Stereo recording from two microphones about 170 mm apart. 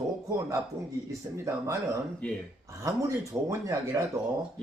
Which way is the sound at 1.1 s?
20° right (ahead or behind).